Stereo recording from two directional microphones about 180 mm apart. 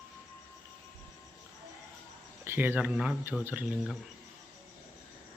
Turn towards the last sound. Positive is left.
turn(degrees=-5)  # may be behind; listen again after turning